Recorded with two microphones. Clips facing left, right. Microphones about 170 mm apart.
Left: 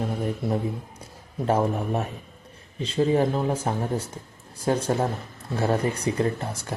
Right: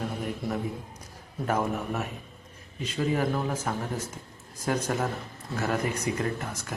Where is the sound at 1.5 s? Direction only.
30° left (ahead or behind).